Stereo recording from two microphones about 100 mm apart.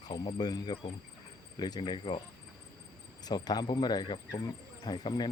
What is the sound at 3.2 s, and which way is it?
Speech, 40° left (ahead or behind).